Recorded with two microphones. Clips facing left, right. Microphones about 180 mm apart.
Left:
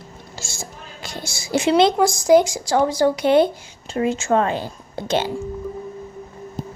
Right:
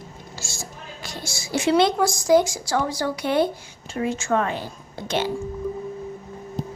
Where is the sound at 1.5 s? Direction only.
20° left (ahead or behind).